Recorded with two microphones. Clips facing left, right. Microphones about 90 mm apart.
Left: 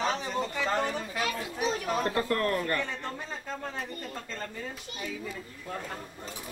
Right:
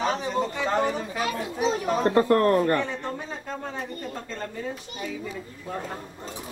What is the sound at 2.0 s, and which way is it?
Speech, 35° right (ahead or behind).